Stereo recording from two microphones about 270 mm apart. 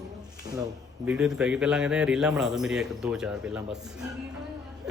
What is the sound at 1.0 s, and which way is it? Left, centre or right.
A man's voice, centre.